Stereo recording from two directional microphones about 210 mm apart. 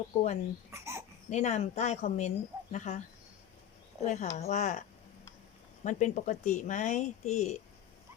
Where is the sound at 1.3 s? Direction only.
35° left (ahead or behind).